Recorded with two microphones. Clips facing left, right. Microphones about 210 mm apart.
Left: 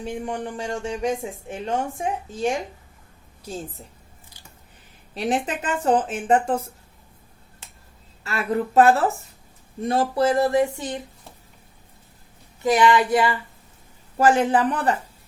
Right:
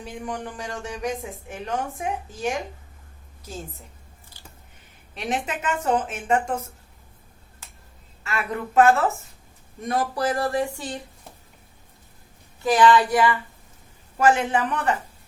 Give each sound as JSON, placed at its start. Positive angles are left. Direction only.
{"t": 0.0, "sound": "speech", "side_deg": 25}
{"t": 5.1, "sound": "speech", "side_deg": 35}
{"t": 8.2, "sound": "speech", "side_deg": 35}
{"t": 12.6, "sound": "speech", "side_deg": 20}